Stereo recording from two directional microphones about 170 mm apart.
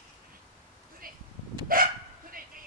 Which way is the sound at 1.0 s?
55° right (ahead or behind).